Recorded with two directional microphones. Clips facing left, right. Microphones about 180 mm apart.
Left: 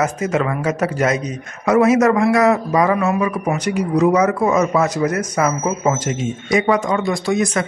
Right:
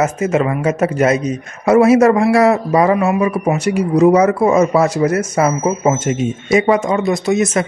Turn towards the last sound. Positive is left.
turn(degrees=-20)  # may be behind; listen again after turning